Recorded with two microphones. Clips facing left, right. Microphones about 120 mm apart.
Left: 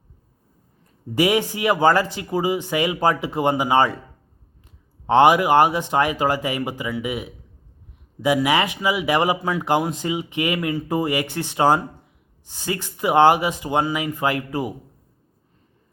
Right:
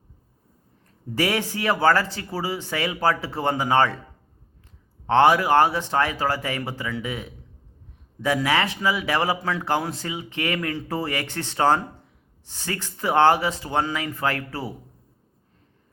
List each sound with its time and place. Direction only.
1.1 s speech: 15° left (ahead or behind)
5.0 s speech: 15° left (ahead or behind)